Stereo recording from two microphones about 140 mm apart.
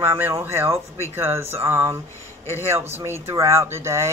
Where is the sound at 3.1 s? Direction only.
20° right (ahead or behind).